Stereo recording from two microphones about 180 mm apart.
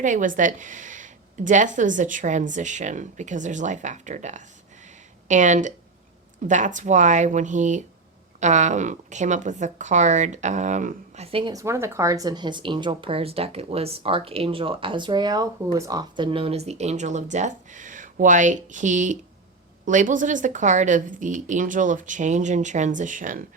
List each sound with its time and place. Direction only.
0.0 s a woman's voice: 45° right (ahead or behind)
11.5 s a woman's voice: 15° right (ahead or behind); by 23.4 s 45° right (ahead or behind)